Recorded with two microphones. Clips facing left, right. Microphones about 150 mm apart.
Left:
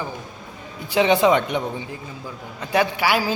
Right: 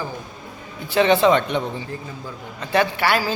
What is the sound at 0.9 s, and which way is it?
A man's voice, 15° left (ahead or behind).